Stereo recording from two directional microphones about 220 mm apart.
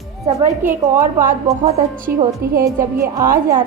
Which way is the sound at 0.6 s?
10° right (ahead or behind).